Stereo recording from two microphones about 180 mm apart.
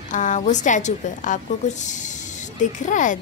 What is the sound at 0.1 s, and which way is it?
A woman's voice, 45° left (ahead or behind).